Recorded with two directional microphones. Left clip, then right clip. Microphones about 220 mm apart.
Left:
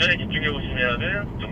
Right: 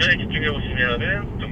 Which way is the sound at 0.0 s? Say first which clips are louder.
Right 2 dB; 15° left (ahead or behind).